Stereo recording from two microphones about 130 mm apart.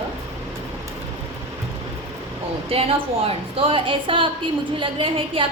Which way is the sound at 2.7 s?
45° right (ahead or behind).